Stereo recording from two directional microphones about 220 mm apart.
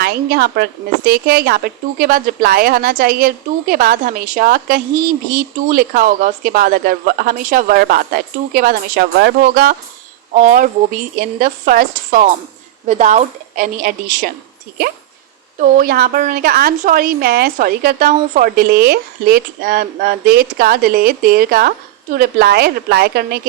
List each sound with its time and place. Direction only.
0.0 s a woman's voice: 45° right (ahead or behind)
15.5 s a woman's voice: 40° right (ahead or behind)